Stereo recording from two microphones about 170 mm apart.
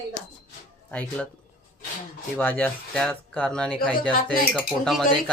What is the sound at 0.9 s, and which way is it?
Speech, 5° left (ahead or behind).